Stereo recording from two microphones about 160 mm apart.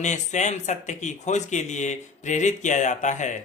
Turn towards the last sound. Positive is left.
turn(degrees=50)  # may be behind; listen again after turning